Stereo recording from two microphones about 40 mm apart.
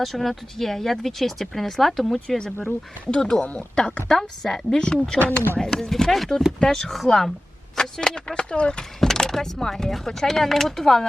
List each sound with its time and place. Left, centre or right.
0.0 s speech: centre
3.1 s speech: centre
3.4 s speech: left
4.1 s speech: centre
9.0 s speech: centre